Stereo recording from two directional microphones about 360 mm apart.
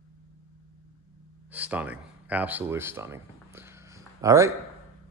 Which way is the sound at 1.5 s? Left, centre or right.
Centre.